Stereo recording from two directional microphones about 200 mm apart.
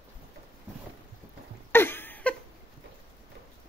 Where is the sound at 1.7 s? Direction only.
10° left (ahead or behind).